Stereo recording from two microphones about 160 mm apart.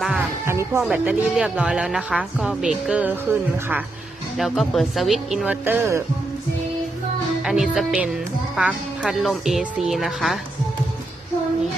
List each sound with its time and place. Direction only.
0.0 s music: 5° right (ahead or behind)
0.4 s music: 15° right (ahead or behind)
0.8 s a woman's voice: 5° right (ahead or behind)
4.4 s a woman's voice: centre (ahead or behind)
7.4 s a woman's voice: 5° right (ahead or behind)